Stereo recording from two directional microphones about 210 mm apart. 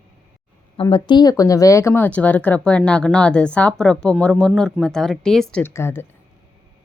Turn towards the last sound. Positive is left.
turn(degrees=10)  # may be behind; listen again after turning